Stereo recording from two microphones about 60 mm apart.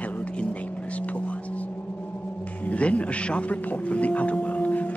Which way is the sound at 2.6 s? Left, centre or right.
Left.